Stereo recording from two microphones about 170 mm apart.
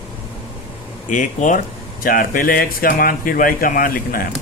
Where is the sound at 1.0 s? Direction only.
50° left (ahead or behind).